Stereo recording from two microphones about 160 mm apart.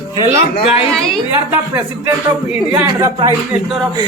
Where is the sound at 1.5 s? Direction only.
10° right (ahead or behind).